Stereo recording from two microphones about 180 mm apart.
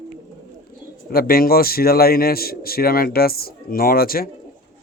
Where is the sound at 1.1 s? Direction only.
55° left (ahead or behind).